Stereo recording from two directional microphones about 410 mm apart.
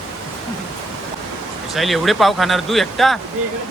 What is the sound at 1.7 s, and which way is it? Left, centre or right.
Speech, centre.